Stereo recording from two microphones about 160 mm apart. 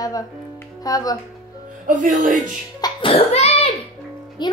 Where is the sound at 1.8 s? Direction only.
55° right (ahead or behind).